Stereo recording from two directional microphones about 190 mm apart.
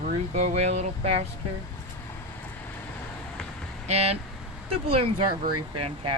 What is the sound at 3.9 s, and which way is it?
Speech, 35° right (ahead or behind).